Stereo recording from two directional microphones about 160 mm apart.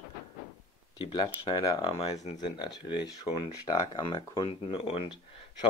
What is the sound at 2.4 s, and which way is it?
Speech, 25° left (ahead or behind).